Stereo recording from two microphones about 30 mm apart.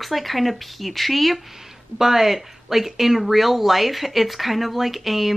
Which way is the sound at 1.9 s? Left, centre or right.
Centre.